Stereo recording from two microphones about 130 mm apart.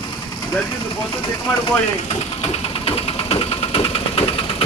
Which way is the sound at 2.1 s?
50° left (ahead or behind).